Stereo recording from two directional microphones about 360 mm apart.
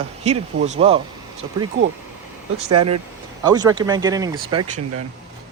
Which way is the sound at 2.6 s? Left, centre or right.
Right.